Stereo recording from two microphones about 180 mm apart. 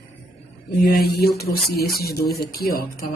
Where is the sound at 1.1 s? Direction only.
60° left (ahead or behind).